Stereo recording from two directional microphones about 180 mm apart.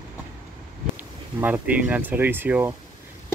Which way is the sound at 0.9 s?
10° right (ahead or behind).